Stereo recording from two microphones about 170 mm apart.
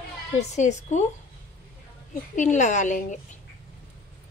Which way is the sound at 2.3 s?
45° left (ahead or behind).